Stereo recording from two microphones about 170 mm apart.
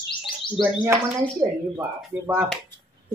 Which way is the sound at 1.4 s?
15° right (ahead or behind).